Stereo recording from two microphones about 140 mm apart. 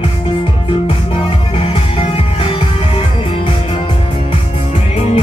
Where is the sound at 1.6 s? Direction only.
45° left (ahead or behind).